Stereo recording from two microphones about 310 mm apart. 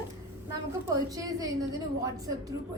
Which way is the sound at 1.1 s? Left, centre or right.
Centre.